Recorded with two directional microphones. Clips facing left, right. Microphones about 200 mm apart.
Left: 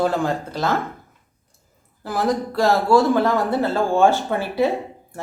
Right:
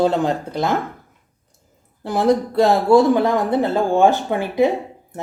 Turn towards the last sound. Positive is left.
turn(degrees=-20)  # may be behind; listen again after turning